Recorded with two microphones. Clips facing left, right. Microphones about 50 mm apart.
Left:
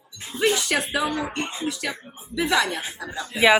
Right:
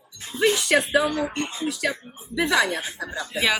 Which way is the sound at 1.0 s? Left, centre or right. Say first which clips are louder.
Right 1 dB; centre.